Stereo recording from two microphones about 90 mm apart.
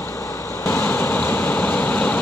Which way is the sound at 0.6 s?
25° left (ahead or behind).